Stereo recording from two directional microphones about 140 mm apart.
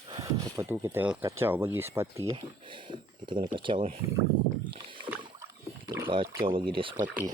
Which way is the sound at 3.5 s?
35° right (ahead or behind).